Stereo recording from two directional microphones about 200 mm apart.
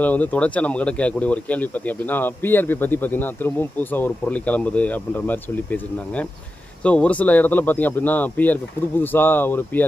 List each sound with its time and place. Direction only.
0.0 s speech: 10° left (ahead or behind)